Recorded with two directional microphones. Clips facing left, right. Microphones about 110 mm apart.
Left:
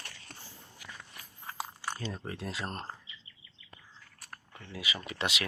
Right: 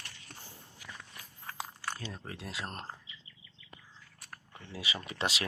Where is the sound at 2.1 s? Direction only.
Centre (ahead or behind).